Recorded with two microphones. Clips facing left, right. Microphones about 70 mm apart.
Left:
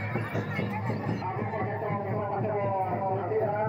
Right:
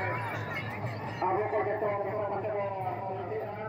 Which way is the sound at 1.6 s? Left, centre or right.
Centre.